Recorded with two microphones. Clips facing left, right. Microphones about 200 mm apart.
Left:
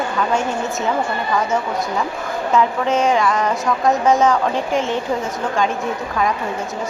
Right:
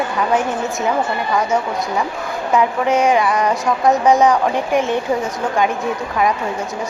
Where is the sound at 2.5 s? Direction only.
15° right (ahead or behind).